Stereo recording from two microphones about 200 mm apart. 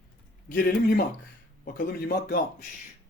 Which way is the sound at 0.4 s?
50° left (ahead or behind).